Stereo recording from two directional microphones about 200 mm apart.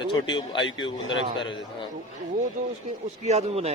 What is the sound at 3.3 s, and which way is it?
Speech, 35° right (ahead or behind).